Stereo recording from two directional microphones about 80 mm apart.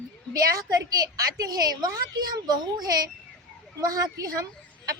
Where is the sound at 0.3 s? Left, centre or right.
Right.